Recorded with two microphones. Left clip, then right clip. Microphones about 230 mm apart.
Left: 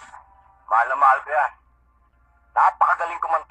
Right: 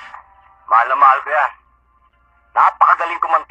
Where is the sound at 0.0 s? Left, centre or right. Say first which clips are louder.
Right 7 dB; centre.